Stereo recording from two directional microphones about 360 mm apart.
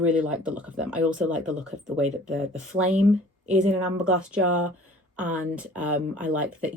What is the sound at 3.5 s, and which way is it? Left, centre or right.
A woman's voice, centre.